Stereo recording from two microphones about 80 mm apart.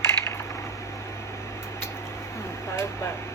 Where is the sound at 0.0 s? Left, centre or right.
Left.